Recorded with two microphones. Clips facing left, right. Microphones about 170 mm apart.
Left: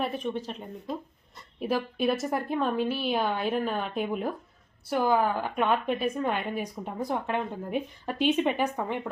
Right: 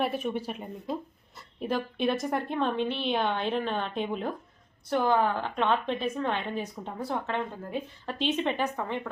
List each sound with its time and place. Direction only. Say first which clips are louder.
0.0 s speech: right 1 dB; 5° right (ahead or behind)
1.4 s a woman's voice: left 2 dB; 5° left (ahead or behind)